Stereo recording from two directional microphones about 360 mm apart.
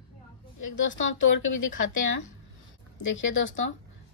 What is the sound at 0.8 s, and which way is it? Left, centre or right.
Speech, left.